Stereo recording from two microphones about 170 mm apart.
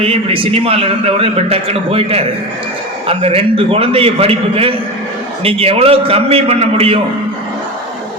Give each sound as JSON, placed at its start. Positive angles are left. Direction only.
{"t": 0.0, "sound": "a man's voice", "side_deg": -35}